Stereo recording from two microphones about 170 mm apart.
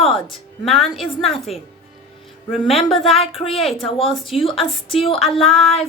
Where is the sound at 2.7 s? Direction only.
35° left (ahead or behind).